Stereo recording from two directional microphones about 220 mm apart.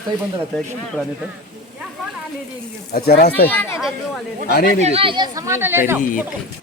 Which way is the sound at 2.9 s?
45° left (ahead or behind).